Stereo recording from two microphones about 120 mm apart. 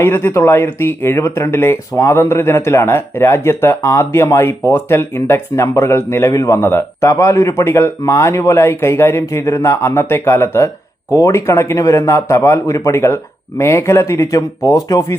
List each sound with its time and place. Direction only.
0.0 s speech: 20° left (ahead or behind)